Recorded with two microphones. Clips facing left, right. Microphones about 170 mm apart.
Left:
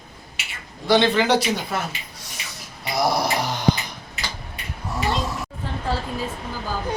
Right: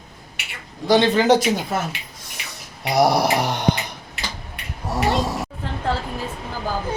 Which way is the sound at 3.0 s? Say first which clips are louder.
Right 4 dB; 70° right (ahead or behind).